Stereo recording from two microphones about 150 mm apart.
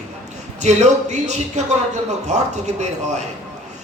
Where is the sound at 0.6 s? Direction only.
50° right (ahead or behind).